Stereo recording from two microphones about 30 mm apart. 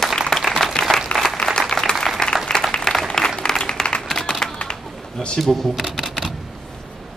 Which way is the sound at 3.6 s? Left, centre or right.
Left.